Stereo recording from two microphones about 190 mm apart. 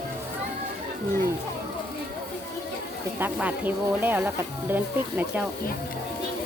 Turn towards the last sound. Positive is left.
turn(degrees=-10)  # may be behind; listen again after turning